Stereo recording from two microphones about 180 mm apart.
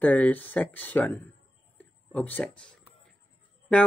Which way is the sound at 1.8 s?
10° left (ahead or behind).